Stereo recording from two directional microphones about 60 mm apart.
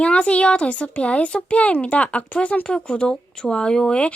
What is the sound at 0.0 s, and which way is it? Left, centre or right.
Speech, centre.